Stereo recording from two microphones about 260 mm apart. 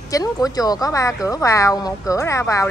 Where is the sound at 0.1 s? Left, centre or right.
Centre.